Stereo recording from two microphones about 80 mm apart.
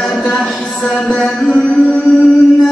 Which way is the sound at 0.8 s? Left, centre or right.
Centre.